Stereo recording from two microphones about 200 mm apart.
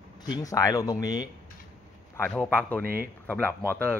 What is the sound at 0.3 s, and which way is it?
Speech, 15° left (ahead or behind).